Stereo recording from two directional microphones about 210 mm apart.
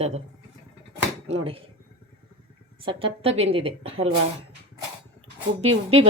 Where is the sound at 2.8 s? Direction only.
25° right (ahead or behind).